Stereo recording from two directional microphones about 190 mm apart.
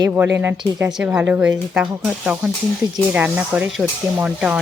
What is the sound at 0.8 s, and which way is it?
Speech, 5° right (ahead or behind).